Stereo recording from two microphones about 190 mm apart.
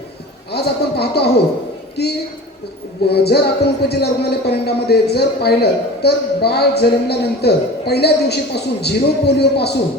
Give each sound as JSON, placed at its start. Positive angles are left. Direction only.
{"t": 0.5, "sound": "speech", "side_deg": 55}
{"t": 3.1, "sound": "speech", "side_deg": 60}